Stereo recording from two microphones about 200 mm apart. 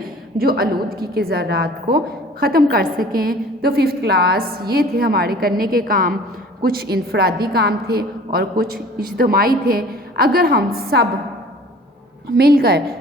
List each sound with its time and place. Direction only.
0.0 s a woman's voice: 50° right (ahead or behind)
12.4 s a woman's voice: 50° right (ahead or behind)